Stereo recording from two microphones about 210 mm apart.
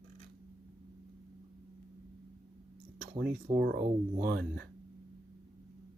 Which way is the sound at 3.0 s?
45° right (ahead or behind).